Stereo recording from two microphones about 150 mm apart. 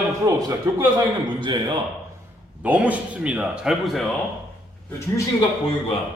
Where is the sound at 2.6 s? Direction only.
10° right (ahead or behind).